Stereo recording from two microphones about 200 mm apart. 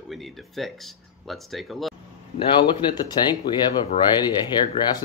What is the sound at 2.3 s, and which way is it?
Speech, 20° left (ahead or behind).